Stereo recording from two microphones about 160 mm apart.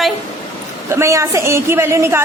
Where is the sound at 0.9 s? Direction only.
20° right (ahead or behind).